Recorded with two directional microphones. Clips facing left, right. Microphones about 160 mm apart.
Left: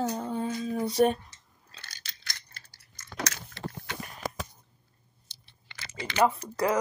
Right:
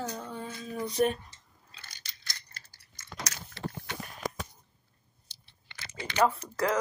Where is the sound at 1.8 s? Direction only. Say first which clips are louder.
Left 2 dB; 90° left.